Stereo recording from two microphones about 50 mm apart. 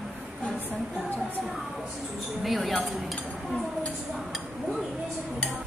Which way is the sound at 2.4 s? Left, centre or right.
Centre.